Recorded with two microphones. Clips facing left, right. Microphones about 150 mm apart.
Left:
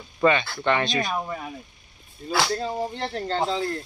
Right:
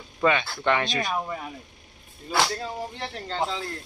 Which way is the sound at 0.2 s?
5° right (ahead or behind).